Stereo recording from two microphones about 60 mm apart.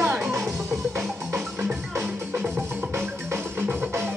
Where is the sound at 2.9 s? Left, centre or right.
Right.